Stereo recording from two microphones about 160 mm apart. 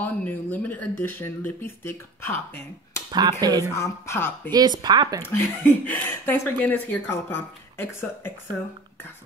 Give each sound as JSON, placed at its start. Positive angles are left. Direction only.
{"t": 0.0, "sound": "speech", "side_deg": 10}
{"t": 3.1, "sound": "speech", "side_deg": -25}
{"t": 3.7, "sound": "speech", "side_deg": 15}
{"t": 4.5, "sound": "speech", "side_deg": -25}
{"t": 5.2, "sound": "speech", "side_deg": 10}